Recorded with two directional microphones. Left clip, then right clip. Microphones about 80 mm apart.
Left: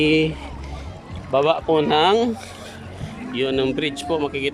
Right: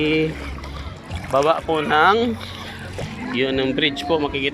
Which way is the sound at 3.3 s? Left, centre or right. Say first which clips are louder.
Even; left.